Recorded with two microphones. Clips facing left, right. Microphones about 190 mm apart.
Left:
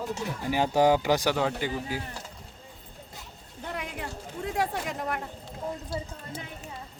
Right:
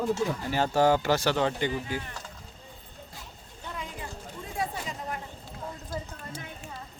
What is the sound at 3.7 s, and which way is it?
Chatter, 70° left (ahead or behind).